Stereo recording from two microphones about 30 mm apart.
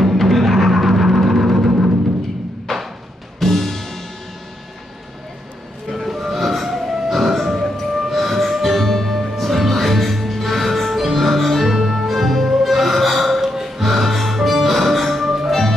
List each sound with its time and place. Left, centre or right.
0.2 s timpani: centre
2.7 s music: centre
5.9 s music: centre